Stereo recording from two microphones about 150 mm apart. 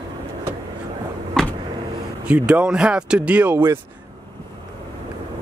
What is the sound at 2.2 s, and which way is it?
Speech, 10° right (ahead or behind).